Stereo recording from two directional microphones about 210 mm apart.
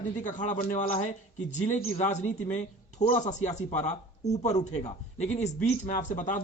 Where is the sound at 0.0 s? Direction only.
35° left (ahead or behind).